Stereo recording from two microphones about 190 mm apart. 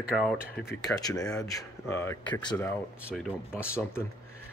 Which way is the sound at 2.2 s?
25° left (ahead or behind).